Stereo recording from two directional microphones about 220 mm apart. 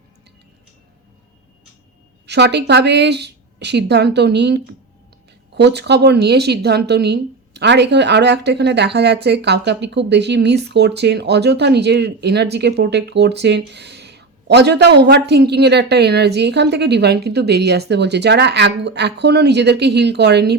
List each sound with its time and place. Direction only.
2.2 s a woman's voice: 50° right (ahead or behind)